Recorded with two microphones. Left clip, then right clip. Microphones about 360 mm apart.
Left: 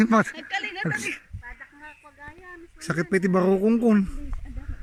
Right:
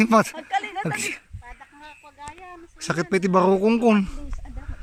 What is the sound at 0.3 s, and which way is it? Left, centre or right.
Speech, right.